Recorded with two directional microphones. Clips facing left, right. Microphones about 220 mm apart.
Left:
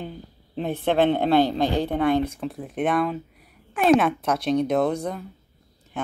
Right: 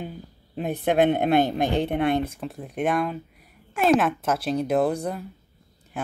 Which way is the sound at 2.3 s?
Centre (ahead or behind).